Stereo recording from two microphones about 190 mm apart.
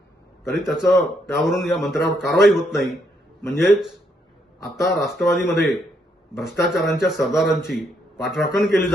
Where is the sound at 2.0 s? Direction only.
60° left (ahead or behind).